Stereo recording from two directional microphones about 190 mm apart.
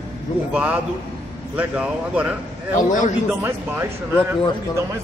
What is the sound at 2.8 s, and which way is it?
Speech, 40° left (ahead or behind).